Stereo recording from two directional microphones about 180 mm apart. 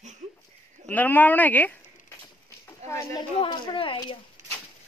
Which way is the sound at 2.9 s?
20° left (ahead or behind).